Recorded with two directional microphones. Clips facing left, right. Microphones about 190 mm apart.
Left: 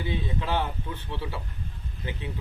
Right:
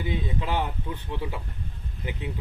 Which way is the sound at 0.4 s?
15° right (ahead or behind).